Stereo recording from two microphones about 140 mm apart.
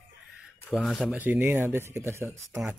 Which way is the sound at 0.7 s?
Centre (ahead or behind).